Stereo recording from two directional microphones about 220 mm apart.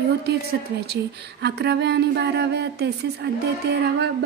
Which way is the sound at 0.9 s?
50° right (ahead or behind).